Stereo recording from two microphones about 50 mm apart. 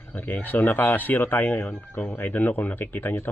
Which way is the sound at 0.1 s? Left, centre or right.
Left.